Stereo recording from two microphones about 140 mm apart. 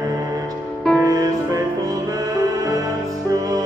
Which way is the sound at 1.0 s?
25° right (ahead or behind).